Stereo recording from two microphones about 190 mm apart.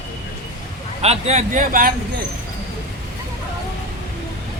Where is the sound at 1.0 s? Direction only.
35° right (ahead or behind).